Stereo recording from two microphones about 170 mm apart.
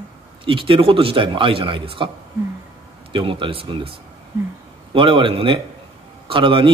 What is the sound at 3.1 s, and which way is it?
A man's voice, 30° right (ahead or behind).